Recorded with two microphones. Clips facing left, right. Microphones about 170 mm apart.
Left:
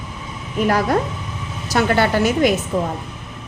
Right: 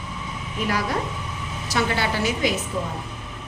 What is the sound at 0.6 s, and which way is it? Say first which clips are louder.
A woman's voice: left 8 dB; 50° left (ahead or behind).